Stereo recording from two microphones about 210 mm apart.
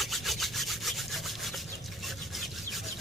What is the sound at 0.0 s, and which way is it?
Wood, centre (ahead or behind).